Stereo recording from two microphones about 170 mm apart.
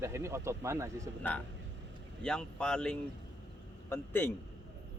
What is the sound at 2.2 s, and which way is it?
A man's voice, 5° left (ahead or behind).